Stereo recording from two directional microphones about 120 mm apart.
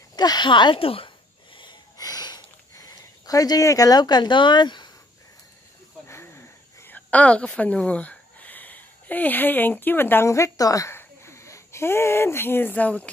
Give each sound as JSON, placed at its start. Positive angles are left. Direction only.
{"t": 0.1, "sound": "a sound", "side_deg": 35}
{"t": 6.0, "sound": "cricket", "side_deg": 20}
{"t": 7.1, "sound": "speech", "side_deg": 10}